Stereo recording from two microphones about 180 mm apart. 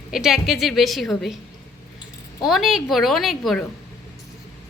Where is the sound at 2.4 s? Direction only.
Centre (ahead or behind).